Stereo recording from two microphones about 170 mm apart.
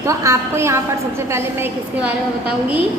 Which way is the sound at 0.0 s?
15° right (ahead or behind).